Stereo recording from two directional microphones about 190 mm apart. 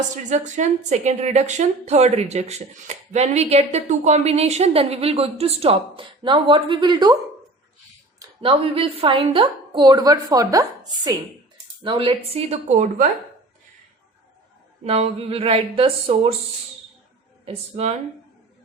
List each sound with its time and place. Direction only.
0.3 s a woman's voice: 40° right (ahead or behind); by 7.2 s 20° right (ahead or behind)
8.4 s a woman's voice: 30° right (ahead or behind)
14.8 s a woman's voice: 30° right (ahead or behind)
17.4 s a woman's voice: 35° right (ahead or behind)